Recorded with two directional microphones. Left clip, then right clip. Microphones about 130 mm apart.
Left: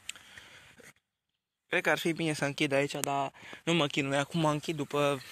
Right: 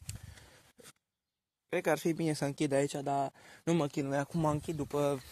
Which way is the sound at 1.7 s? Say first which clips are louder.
Left 3 dB; 25° right (ahead or behind).